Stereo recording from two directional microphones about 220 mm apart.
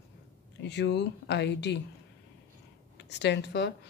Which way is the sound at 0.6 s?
50° left (ahead or behind).